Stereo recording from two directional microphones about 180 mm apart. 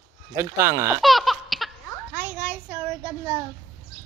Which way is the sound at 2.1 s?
10° right (ahead or behind).